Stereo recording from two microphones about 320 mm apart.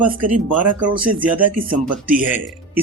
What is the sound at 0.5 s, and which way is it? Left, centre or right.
Speech, right.